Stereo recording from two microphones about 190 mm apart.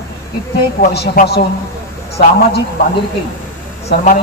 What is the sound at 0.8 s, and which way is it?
Speech, 55° left (ahead or behind).